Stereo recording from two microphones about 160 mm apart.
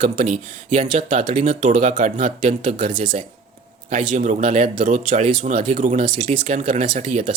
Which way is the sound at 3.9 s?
50° right (ahead or behind).